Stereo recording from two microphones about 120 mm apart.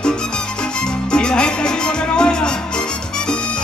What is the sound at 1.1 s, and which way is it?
Music, 5° left (ahead or behind).